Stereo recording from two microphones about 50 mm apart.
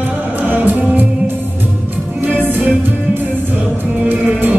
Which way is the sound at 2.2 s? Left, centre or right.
Right.